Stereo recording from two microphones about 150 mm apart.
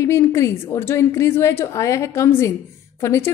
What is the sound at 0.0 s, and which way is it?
A woman's voice, 20° left (ahead or behind).